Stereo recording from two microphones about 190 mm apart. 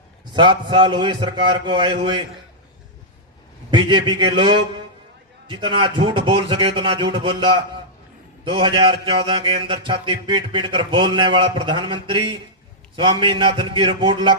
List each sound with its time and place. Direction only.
0.3 s mantra: 25° right (ahead or behind)
3.7 s mantra: 25° right (ahead or behind)
8.4 s mantra: 30° right (ahead or behind)